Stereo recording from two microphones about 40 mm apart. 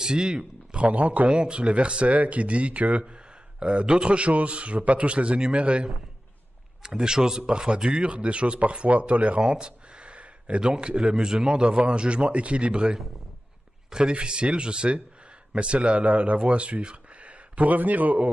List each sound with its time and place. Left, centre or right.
0.0 s a man's voice: right
0.8 s a man's voice: right
6.8 s speech: centre; by 9.4 s right
9.4 s a man's voice: right
14.0 s speech: right